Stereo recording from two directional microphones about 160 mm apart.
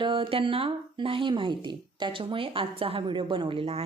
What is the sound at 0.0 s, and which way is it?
A woman's voice, 35° right (ahead or behind).